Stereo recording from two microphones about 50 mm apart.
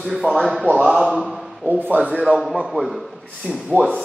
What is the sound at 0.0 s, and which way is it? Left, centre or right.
Speech, centre.